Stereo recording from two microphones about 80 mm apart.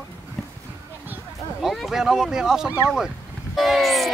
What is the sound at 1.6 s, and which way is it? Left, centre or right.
Speech, centre.